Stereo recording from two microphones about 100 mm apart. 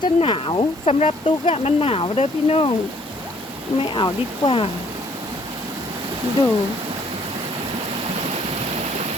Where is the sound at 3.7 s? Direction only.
55° left (ahead or behind).